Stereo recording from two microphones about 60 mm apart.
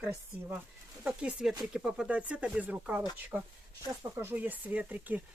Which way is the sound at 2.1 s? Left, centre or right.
Right.